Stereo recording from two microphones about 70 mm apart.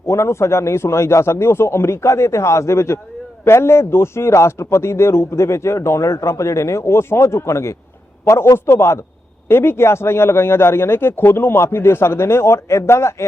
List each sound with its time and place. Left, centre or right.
0.1 s a man's voice: left